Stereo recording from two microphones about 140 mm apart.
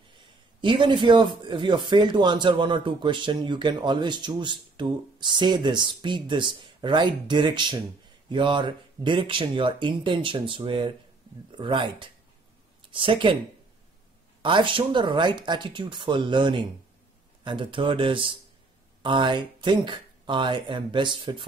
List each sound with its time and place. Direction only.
0.6 s speech: 35° right (ahead or behind)
14.4 s speech: 35° right (ahead or behind)